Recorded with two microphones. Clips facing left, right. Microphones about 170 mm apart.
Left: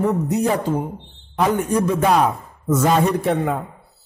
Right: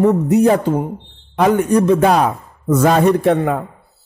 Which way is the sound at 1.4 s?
65° right (ahead or behind).